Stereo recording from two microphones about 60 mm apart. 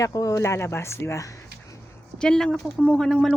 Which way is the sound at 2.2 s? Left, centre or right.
Centre.